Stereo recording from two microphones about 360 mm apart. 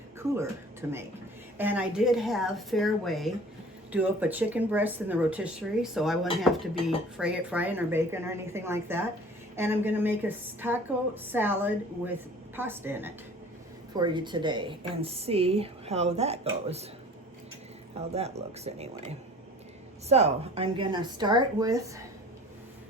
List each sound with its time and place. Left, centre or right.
0.2 s a woman's voice: centre
18.1 s speech: centre
20.1 s speech: centre